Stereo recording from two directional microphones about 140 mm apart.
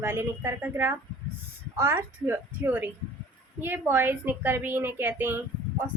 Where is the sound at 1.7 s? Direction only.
15° right (ahead or behind).